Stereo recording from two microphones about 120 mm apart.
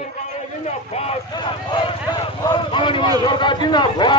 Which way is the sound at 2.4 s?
40° left (ahead or behind).